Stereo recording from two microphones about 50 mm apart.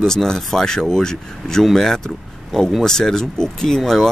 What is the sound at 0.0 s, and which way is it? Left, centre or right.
Speech, centre.